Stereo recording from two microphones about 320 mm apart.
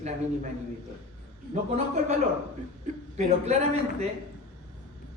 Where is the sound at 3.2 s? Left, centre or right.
Right.